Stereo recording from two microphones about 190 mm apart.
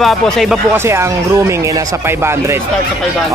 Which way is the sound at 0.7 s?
15° right (ahead or behind).